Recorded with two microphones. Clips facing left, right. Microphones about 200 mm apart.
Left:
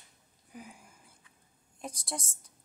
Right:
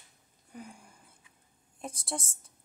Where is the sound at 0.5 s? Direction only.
Centre (ahead or behind).